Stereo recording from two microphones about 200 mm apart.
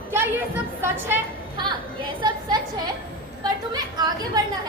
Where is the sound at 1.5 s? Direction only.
20° right (ahead or behind).